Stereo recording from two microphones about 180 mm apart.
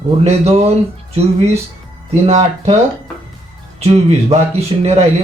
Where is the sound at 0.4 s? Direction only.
35° right (ahead or behind).